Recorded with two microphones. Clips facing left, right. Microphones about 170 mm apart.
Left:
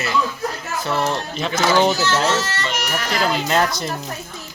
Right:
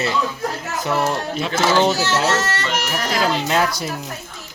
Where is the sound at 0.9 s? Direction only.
10° right (ahead or behind).